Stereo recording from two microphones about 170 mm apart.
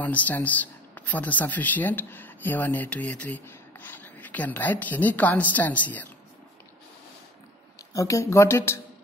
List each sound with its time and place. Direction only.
0.0 s speech: 10° left (ahead or behind)
7.9 s speech: 20° left (ahead or behind)